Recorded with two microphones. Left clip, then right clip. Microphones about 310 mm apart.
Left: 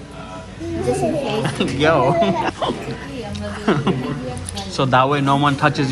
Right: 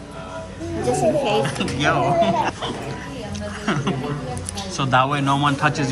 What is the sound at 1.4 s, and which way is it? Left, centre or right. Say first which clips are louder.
A man's voice: left 4 dB; centre.